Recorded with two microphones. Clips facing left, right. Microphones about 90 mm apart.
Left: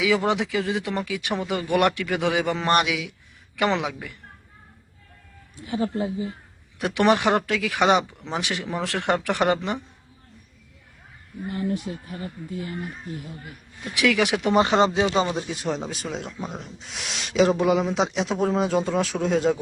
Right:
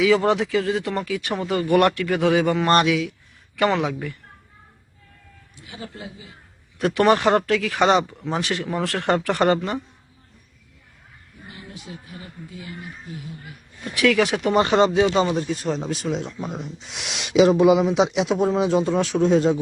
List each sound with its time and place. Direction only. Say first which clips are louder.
0.0 s speech: right 4 dB; 15° left (ahead or behind)
5.6 s speech: left 11 dB; 40° left (ahead or behind)
6.7 s speech: right 2 dB; 15° left (ahead or behind)
11.4 s speech: left 12 dB; 50° left (ahead or behind)
13.9 s speech: right 2 dB; 15° left (ahead or behind)
15.4 s speech: right 3 dB; 5° left (ahead or behind)